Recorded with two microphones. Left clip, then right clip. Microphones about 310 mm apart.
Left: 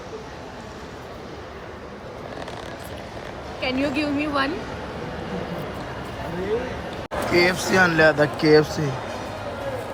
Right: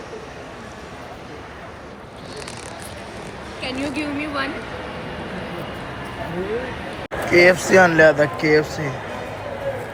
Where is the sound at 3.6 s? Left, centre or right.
Left.